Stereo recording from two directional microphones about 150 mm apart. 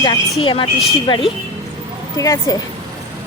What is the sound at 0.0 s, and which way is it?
Speech, 30° left (ahead or behind).